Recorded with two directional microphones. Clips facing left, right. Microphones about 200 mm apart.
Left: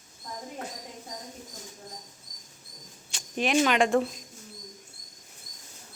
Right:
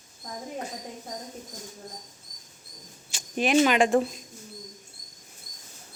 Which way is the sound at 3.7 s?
5° right (ahead or behind).